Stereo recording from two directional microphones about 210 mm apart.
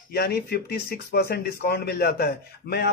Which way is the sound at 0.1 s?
50° left (ahead or behind).